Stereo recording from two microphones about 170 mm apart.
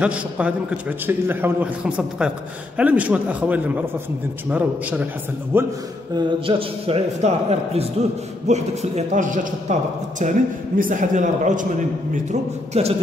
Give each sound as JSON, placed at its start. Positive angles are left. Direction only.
{"t": 0.0, "sound": "a man's voice", "side_deg": -5}
{"t": 6.1, "sound": "a man's voice", "side_deg": -35}